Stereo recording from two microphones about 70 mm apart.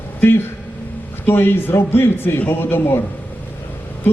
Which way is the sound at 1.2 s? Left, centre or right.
Left.